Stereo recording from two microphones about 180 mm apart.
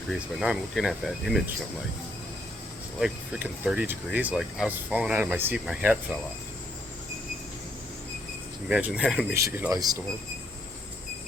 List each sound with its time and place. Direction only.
0.1 s speech: centre (ahead or behind)
3.0 s speech: 10° right (ahead or behind)
8.7 s speech: 5° right (ahead or behind); by 10.0 s 20° right (ahead or behind)